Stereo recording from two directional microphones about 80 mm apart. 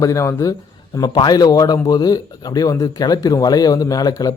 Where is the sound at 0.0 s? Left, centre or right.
Left.